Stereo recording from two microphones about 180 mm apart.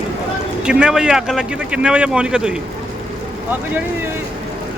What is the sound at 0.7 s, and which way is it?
Speech, 5° right (ahead or behind).